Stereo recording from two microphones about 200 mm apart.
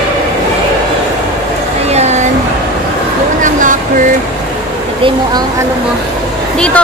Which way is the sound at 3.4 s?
40° right (ahead or behind).